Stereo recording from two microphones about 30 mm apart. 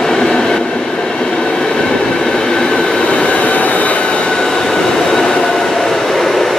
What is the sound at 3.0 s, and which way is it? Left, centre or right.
Train, left.